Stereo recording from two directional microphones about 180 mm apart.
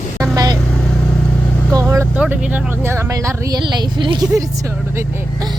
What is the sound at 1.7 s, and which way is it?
Speech, 15° right (ahead or behind).